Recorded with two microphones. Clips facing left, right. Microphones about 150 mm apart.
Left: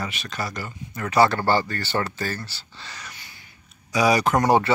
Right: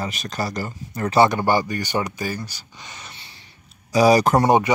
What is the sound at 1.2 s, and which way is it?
Speech, 15° right (ahead or behind).